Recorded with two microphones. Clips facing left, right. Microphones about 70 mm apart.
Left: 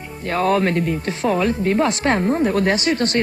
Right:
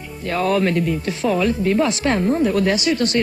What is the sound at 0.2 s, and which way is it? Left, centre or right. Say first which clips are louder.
Speech: left 1 dB; left.